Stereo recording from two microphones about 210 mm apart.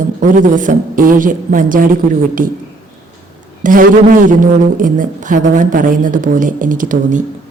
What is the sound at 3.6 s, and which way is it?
Speech, 40° right (ahead or behind).